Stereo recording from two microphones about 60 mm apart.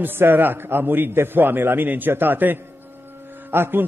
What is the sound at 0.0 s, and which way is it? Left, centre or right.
Music, right.